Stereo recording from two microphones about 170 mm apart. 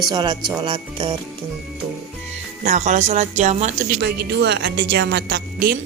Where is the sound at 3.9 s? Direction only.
80° right.